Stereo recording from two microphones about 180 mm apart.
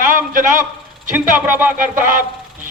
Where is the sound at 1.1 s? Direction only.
10° right (ahead or behind).